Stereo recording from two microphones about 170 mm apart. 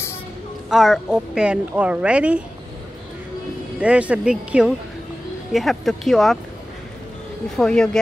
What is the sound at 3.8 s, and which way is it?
Speech, 10° right (ahead or behind).